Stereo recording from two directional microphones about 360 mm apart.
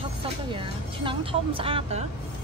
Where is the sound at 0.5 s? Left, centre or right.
Centre.